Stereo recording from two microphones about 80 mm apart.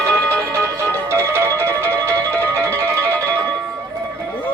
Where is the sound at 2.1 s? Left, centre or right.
Centre.